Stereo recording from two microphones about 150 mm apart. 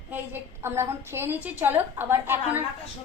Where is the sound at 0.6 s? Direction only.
15° right (ahead or behind).